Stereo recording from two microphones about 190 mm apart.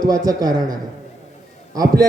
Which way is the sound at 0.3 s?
20° right (ahead or behind).